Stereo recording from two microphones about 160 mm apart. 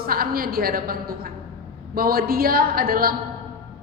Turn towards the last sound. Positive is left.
turn(degrees=-65)  # may be behind; listen again after turning